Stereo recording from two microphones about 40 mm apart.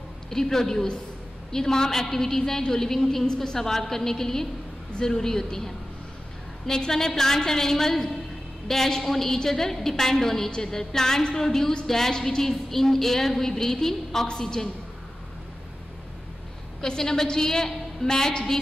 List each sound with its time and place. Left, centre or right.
0.3 s a woman's voice: centre
6.9 s a woman's voice: centre
16.8 s a woman's voice: centre